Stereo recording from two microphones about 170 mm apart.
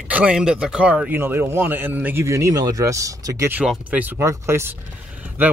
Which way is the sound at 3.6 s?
5° right (ahead or behind).